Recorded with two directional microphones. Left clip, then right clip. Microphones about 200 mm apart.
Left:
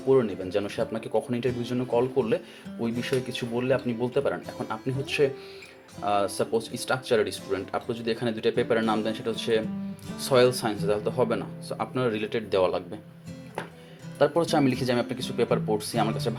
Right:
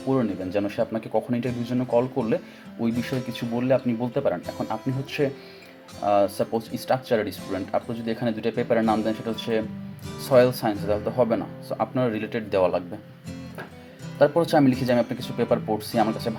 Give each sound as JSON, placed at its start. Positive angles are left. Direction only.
{"t": 0.1, "sound": "speech", "side_deg": 15}
{"t": 4.4, "sound": "speech", "side_deg": 0}
{"t": 4.7, "sound": "speech", "side_deg": 15}
{"t": 14.2, "sound": "speech", "side_deg": 10}